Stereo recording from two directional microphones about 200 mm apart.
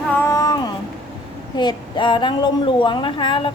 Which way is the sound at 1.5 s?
20° left (ahead or behind).